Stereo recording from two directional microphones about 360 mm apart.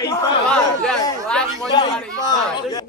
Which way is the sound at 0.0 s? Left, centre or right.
Centre.